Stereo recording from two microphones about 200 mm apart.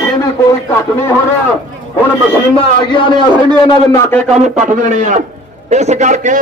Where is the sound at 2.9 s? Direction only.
25° left (ahead or behind).